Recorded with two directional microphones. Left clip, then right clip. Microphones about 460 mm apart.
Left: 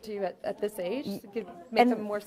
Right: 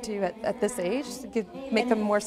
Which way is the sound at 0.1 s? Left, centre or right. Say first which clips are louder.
Right 4 dB; right.